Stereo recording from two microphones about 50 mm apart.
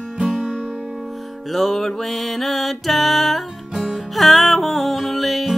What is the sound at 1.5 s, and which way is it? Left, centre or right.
Music, centre.